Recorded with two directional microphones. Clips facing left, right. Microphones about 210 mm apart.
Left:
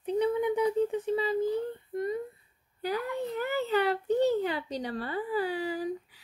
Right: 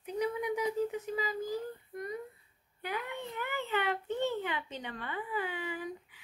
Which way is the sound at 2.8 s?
35° left (ahead or behind).